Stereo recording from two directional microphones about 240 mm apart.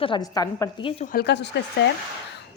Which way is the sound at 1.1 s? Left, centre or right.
Left.